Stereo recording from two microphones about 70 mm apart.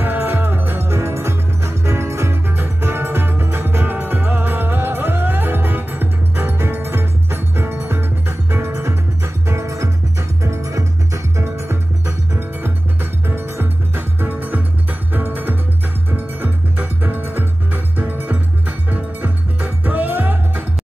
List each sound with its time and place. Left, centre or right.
0.0 s music: right